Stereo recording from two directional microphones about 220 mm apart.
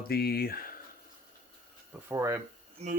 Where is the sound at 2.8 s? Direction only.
30° right (ahead or behind).